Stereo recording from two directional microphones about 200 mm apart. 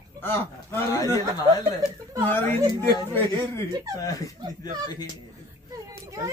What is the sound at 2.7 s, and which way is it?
Speech, 15° left (ahead or behind).